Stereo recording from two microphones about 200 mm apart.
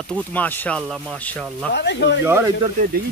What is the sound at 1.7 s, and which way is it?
Speech, 60° left (ahead or behind).